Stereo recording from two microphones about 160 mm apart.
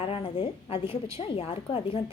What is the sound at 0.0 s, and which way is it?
A woman's voice, 35° left (ahead or behind).